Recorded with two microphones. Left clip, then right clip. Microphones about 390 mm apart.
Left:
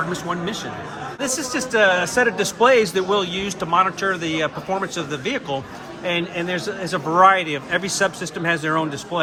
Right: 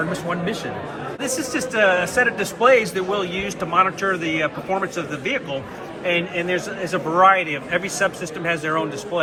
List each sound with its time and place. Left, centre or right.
1.2 s a man's voice: left